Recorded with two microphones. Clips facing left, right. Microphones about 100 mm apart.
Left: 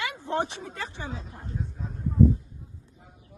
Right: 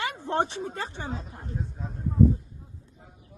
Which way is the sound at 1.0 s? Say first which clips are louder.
Right 2 dB; 45° right (ahead or behind).